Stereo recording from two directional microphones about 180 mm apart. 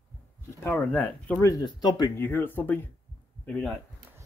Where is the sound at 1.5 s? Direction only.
25° left (ahead or behind); by 3.7 s 5° left (ahead or behind).